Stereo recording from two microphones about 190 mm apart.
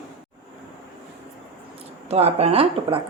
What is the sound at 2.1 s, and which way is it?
Speech, 35° right (ahead or behind).